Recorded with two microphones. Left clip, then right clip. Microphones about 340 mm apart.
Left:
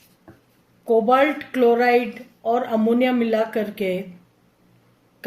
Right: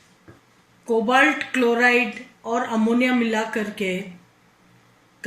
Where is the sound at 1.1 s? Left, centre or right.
Left.